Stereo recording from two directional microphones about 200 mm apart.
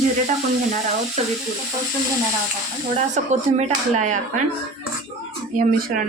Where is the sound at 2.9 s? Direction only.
35° right (ahead or behind).